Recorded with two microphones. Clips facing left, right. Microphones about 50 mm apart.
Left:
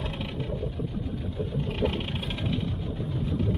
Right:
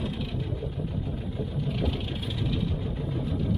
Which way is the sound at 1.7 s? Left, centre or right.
Left.